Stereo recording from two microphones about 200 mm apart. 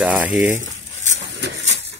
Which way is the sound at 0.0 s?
5° right (ahead or behind).